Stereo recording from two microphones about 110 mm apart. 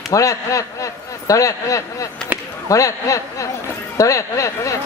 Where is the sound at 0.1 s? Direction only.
30° left (ahead or behind).